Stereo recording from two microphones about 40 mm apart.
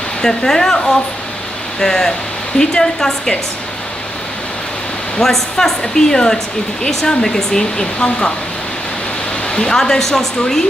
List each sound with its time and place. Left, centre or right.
0.2 s speech: centre
5.2 s speech: centre
9.5 s speech: left
9.8 s speech: centre